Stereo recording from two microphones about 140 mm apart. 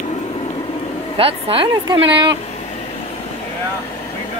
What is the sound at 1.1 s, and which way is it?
Speech, 40° right (ahead or behind).